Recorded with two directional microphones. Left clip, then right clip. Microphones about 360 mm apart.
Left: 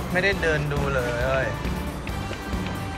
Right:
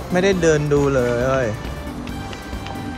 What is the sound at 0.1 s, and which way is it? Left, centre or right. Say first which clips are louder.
Speech: right 6 dB; centre.